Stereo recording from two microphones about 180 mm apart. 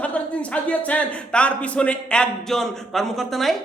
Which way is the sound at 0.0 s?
10° left (ahead or behind).